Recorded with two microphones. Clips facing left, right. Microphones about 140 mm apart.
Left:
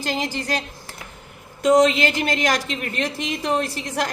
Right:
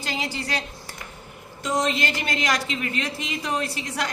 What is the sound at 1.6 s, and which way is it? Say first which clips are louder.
Speech: left 10 dB; 70° left (ahead or behind).